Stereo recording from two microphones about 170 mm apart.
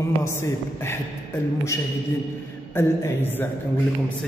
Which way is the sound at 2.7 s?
15° left (ahead or behind).